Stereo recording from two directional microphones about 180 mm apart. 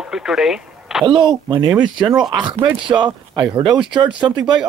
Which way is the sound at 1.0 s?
25° right (ahead or behind).